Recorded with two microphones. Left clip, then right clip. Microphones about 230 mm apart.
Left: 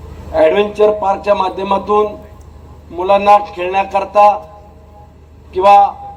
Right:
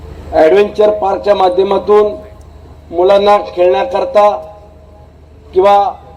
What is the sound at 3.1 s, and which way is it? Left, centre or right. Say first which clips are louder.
Speech: left 2 dB; left.